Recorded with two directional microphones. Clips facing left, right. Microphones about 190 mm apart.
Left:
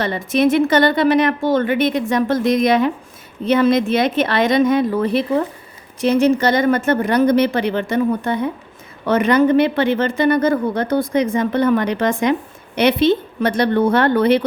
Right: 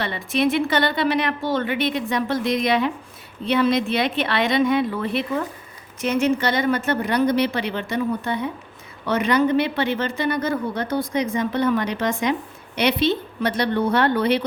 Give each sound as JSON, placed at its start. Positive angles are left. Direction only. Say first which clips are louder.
{"t": 0.0, "sound": "speech", "louder": "left 5 dB", "side_deg": 45}